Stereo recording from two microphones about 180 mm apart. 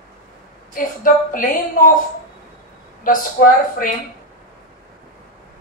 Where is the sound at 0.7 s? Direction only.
50° left (ahead or behind).